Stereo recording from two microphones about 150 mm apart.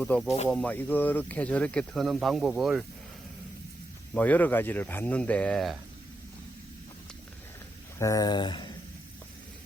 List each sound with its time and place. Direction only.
0.0 s speech: 5° left (ahead or behind)
4.1 s speech: 10° left (ahead or behind)
7.9 s speech: 20° left (ahead or behind)